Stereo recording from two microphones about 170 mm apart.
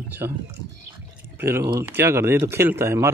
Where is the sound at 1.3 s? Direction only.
15° right (ahead or behind).